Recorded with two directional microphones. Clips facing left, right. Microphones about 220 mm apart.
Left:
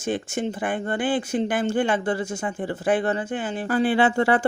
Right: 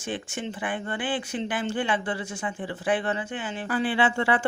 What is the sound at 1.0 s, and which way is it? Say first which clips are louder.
Speech: left 7 dB; 40° left (ahead or behind).